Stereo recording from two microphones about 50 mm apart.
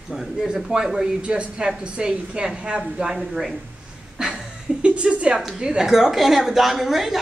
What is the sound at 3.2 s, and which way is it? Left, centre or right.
Speech, centre.